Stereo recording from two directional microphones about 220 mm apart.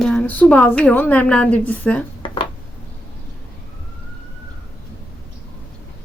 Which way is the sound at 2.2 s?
25° left (ahead or behind).